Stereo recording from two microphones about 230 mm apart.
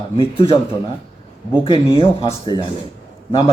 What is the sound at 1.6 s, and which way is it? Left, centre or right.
Speech, left.